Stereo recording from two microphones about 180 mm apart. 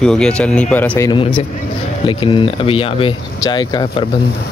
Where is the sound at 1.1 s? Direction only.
30° left (ahead or behind).